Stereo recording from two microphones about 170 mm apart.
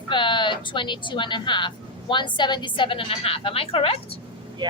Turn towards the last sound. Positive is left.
turn(degrees=-25)  # may be behind; listen again after turning